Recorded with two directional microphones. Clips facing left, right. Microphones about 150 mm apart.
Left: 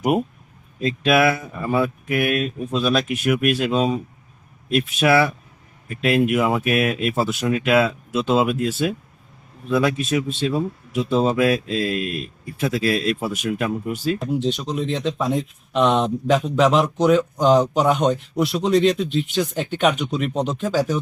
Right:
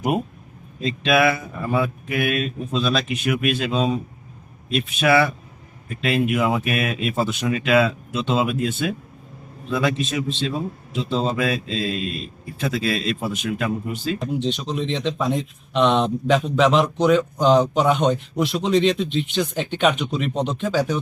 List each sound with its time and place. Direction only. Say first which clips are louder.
0.8 s speech: left 1 dB; 5° left (ahead or behind)
11.7 s speech: left 2 dB; 50° left (ahead or behind)
12.1 s speech: left 2 dB; 5° left (ahead or behind)